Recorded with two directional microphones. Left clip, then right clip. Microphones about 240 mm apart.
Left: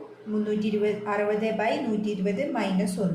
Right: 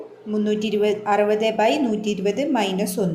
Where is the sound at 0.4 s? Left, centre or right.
Right.